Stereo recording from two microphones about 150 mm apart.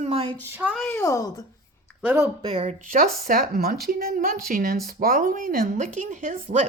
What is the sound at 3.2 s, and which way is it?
Speech, 90° right.